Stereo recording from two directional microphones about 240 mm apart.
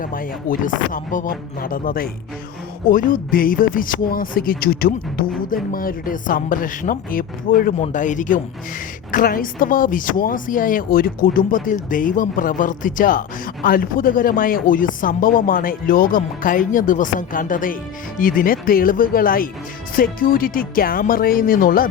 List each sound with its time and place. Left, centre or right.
0.0 s speech: left